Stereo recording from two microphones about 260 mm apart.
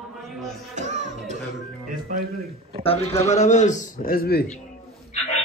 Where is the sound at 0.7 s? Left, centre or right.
Right.